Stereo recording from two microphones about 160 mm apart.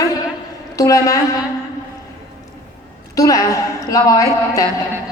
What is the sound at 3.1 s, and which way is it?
A woman's voice, 20° left (ahead or behind).